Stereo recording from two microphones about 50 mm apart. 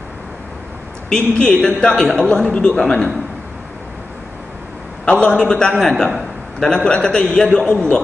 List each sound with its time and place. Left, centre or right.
1.1 s a man's voice: left
1.8 s a man's voice: centre
2.2 s a man's voice: left
2.7 s a man's voice: centre
5.0 s a man's voice: left
5.8 s a man's voice: centre